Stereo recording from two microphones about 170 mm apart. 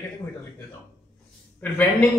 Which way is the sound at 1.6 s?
10° left (ahead or behind).